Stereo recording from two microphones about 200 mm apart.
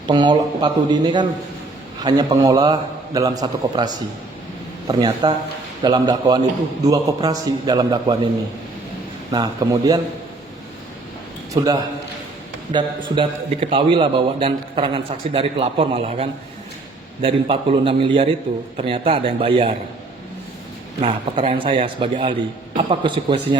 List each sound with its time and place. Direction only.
0.1 s a man's voice: 25° right (ahead or behind)
9.3 s speech: 20° right (ahead or behind)
11.5 s a man's voice: 15° right (ahead or behind)
21.0 s a man's voice: 30° right (ahead or behind)